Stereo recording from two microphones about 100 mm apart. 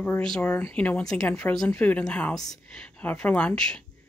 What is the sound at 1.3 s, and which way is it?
Speech, 20° left (ahead or behind).